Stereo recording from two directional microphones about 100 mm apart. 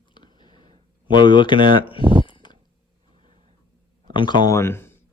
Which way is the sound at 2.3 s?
50° left (ahead or behind).